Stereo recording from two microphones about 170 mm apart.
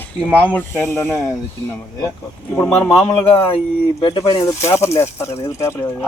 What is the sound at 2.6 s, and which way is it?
Speech, 10° left (ahead or behind).